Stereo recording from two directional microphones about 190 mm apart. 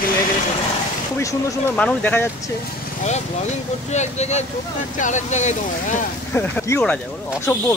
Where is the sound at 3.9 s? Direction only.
35° left (ahead or behind).